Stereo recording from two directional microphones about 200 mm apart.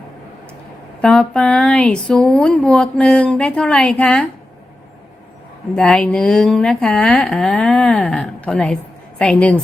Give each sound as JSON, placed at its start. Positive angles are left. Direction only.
{"t": 1.0, "sound": "a woman's voice", "side_deg": 5}
{"t": 5.7, "sound": "a woman's voice", "side_deg": 5}